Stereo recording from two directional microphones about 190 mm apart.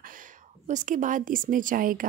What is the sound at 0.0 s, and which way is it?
Speech, 45° right (ahead or behind).